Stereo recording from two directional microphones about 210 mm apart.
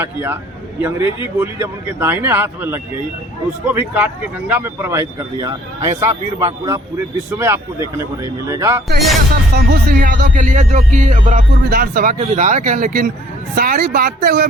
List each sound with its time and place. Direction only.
0.0 s speech: 10° right (ahead or behind)
9.6 s speech: 45° right (ahead or behind)